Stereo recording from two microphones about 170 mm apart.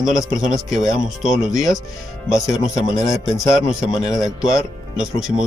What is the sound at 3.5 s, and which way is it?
Speech, centre (ahead or behind).